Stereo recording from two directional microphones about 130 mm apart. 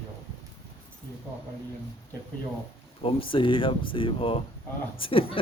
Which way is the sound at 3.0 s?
40° left (ahead or behind).